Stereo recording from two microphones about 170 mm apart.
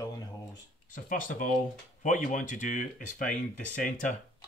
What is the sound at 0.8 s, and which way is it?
Speech, 50° left (ahead or behind).